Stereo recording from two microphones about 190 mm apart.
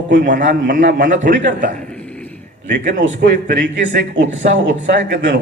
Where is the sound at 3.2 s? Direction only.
55° right (ahead or behind).